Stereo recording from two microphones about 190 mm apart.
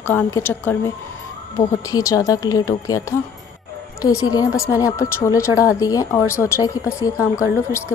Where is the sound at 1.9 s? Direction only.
15° left (ahead or behind).